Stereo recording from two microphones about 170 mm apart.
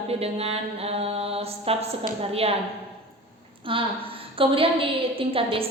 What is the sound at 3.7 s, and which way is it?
A woman's voice, 30° right (ahead or behind).